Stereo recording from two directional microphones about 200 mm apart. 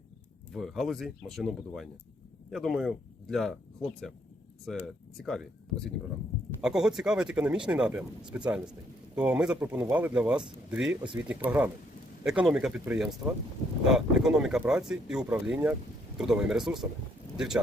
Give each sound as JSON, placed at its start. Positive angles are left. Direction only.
{"t": 0.5, "sound": "speech", "side_deg": 0}
{"t": 11.0, "sound": "speech", "side_deg": -20}
{"t": 11.3, "sound": "speech", "side_deg": -5}